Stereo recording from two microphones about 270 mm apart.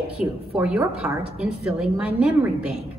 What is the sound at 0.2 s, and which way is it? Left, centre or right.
A woman's voice, centre.